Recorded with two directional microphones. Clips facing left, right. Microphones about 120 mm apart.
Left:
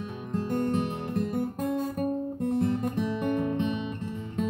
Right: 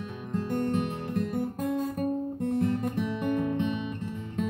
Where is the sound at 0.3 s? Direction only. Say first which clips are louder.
Left 1 dB; 35° left (ahead or behind).